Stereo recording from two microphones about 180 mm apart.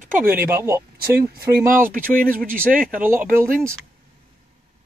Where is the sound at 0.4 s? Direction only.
15° right (ahead or behind).